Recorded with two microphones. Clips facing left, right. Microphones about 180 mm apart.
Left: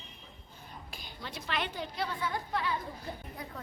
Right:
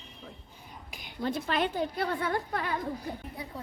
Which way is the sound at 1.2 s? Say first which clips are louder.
Right 8 dB; 50° right (ahead or behind).